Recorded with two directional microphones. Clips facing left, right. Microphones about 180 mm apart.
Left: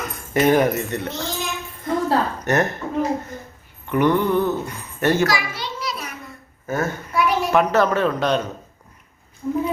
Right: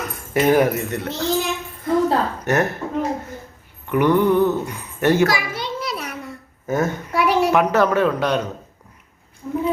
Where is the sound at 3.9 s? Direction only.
10° right (ahead or behind).